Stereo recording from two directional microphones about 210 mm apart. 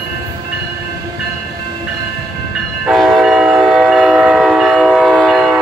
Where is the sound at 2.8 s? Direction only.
Centre (ahead or behind).